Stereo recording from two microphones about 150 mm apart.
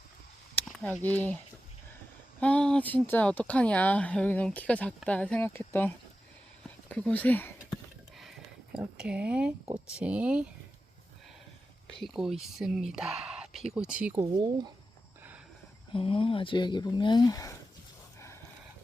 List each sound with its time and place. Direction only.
1.0 s speech: 10° left (ahead or behind)
2.4 s speech: 5° left (ahead or behind)
8.2 s a sound: 5° right (ahead or behind)
9.7 s speech: 5° right (ahead or behind)
11.9 s speech: centre (ahead or behind)
14.2 s speech: 30° right (ahead or behind)
15.9 s speech: 35° left (ahead or behind)